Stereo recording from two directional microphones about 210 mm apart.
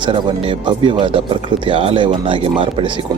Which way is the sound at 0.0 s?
25° right (ahead or behind).